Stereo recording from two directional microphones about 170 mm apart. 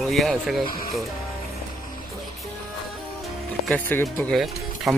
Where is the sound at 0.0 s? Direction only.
Centre (ahead or behind).